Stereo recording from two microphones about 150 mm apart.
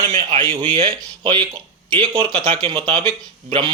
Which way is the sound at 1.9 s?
40° right (ahead or behind).